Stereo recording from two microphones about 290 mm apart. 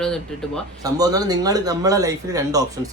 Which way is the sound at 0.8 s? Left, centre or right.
Centre.